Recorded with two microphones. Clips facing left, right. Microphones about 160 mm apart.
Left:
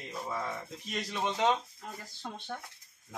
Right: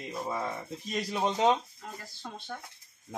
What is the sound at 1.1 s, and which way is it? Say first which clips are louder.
Speech: right 4 dB; 35° right (ahead or behind).